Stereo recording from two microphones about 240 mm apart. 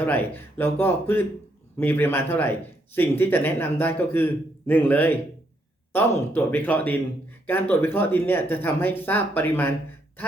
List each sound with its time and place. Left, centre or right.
0.0 s a man's voice: centre